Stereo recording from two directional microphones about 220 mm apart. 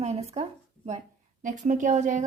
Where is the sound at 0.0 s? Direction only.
30° right (ahead or behind).